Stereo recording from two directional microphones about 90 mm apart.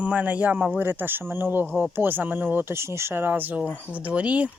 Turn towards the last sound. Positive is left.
turn(degrees=-15)  # may be behind; listen again after turning